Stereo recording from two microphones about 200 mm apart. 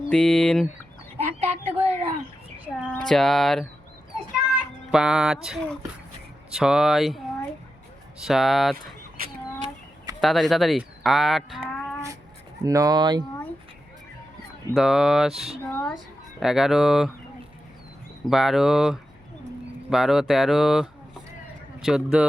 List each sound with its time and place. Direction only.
0.1 s speech: 5° left (ahead or behind)
1.2 s a sound: 30° right (ahead or behind)
2.9 s speech: centre (ahead or behind)
4.1 s a sound: 5° right (ahead or behind)
6.5 s speech: 5° right (ahead or behind)
8.2 s speech: centre (ahead or behind)
10.2 s speech: centre (ahead or behind)
12.6 s speech: 15° right (ahead or behind)
14.7 s speech: centre (ahead or behind)
15.6 s a sound: 5° left (ahead or behind)
16.4 s speech: centre (ahead or behind)
18.3 s speech: centre (ahead or behind)